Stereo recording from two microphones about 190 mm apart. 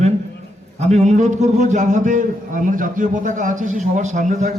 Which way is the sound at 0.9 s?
35° right (ahead or behind).